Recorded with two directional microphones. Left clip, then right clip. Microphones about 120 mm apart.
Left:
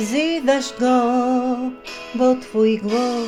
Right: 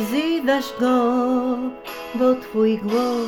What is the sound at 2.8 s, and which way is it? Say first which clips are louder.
Music: even; 35° left (ahead or behind).